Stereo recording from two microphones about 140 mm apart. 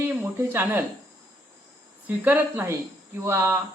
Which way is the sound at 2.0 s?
10° right (ahead or behind).